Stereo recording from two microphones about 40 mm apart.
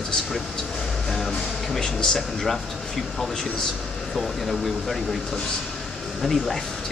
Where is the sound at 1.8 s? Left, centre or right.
Centre.